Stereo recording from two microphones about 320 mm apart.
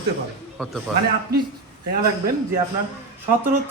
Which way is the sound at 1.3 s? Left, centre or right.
Right.